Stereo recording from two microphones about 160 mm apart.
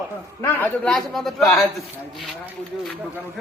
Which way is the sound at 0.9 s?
Centre (ahead or behind).